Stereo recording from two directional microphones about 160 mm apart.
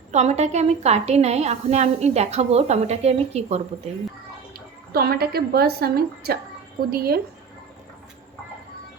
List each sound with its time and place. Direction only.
0.1 s a woman's voice: 45° right (ahead or behind)
4.9 s a woman's voice: 75° right (ahead or behind)